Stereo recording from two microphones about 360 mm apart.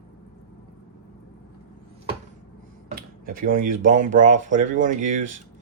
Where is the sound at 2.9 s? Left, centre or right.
Right.